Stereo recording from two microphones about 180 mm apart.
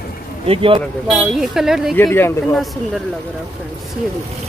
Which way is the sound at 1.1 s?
Centre (ahead or behind).